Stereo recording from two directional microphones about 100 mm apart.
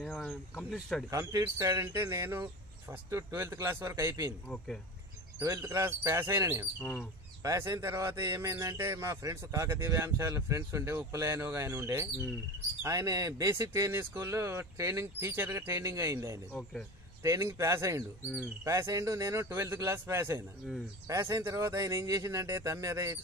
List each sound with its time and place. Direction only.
0.0 s speech: 10° left (ahead or behind)
1.1 s speech: 30° right (ahead or behind)
5.4 s speech: 30° right (ahead or behind)
6.8 s speech: 10° left (ahead or behind)
7.4 s speech: 30° right (ahead or behind)